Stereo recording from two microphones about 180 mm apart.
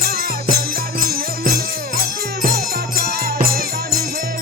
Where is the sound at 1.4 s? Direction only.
60° right (ahead or behind).